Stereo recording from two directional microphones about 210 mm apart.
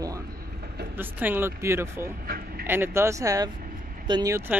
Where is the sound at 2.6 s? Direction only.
10° right (ahead or behind).